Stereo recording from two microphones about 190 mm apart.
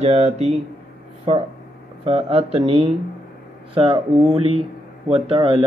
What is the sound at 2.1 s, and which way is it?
Speech, 30° right (ahead or behind).